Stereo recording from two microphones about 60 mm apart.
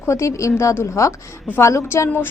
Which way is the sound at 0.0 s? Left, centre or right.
Left.